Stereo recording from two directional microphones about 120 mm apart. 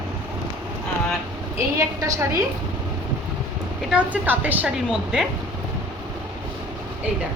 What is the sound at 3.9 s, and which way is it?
A woman's voice, 10° right (ahead or behind).